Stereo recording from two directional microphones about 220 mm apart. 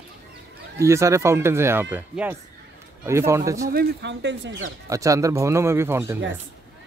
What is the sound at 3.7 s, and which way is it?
Speech, 45° right (ahead or behind).